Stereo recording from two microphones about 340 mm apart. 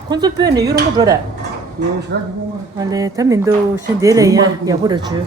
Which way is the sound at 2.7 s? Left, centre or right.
Centre.